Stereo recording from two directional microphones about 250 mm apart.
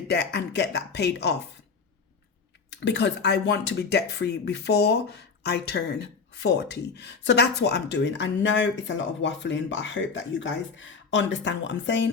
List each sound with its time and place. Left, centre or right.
0.1 s speech: left
2.8 s speech: left